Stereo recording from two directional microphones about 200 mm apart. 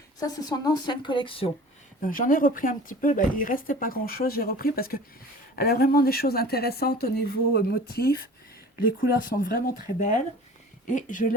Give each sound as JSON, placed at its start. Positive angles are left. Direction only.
{"t": 0.2, "sound": "speech", "side_deg": 20}
{"t": 2.0, "sound": "speech", "side_deg": 40}